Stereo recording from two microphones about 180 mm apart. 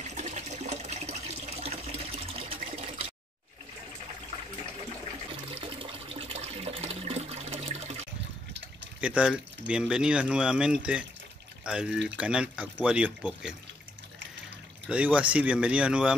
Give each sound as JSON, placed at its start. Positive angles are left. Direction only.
{"t": 0.0, "sound": "water", "side_deg": -40}
{"t": 5.3, "sound": "water", "side_deg": -30}
{"t": 9.0, "sound": "speech", "side_deg": -5}
{"t": 14.9, "sound": "speech", "side_deg": -5}